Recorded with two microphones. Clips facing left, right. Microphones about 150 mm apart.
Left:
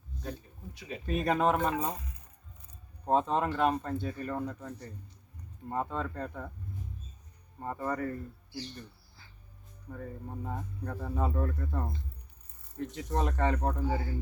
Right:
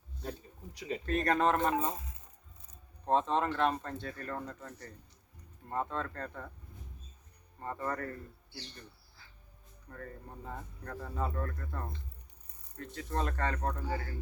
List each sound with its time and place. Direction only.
0.2 s a sound: 35° right (ahead or behind)
1.0 s speech: 5° left (ahead or behind)
3.0 s speech: 10° left (ahead or behind)
7.6 s speech: 10° left (ahead or behind)
9.9 s speech: 10° left (ahead or behind)